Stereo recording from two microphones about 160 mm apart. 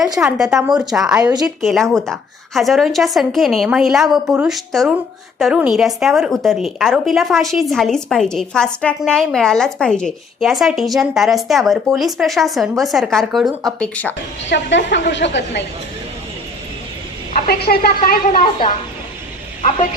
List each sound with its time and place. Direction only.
0.2 s a woman's voice: 5° right (ahead or behind)
14.5 s a woman's voice: 90° left
17.3 s a woman's voice: 70° left (ahead or behind)
19.6 s a woman's voice: 55° left (ahead or behind)